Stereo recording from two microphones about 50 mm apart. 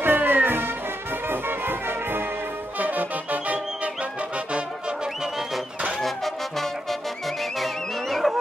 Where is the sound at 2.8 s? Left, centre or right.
Right.